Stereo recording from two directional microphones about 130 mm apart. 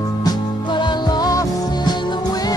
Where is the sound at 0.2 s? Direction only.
35° left (ahead or behind).